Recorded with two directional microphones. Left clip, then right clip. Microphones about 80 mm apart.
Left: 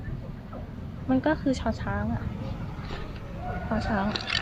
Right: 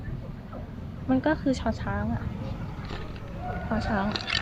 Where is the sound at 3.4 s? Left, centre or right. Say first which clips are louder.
Even; left.